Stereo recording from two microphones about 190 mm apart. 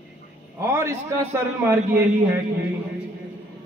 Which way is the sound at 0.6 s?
15° right (ahead or behind).